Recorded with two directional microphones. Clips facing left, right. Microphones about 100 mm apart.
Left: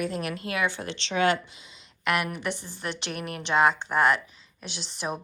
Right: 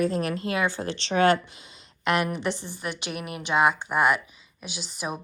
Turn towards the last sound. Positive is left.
turn(degrees=-5)  # may be behind; listen again after turning